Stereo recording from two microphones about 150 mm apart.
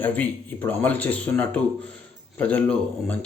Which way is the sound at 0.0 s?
10° left (ahead or behind).